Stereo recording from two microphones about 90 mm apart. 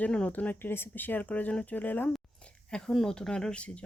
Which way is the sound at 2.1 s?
10° left (ahead or behind).